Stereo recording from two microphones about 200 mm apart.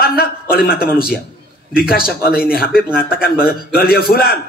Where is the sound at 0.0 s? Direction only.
50° left (ahead or behind).